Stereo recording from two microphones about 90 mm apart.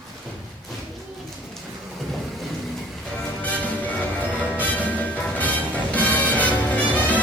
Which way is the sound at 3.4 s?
15° left (ahead or behind).